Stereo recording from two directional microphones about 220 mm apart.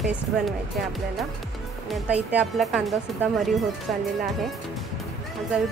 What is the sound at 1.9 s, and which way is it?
A woman's voice, 5° right (ahead or behind).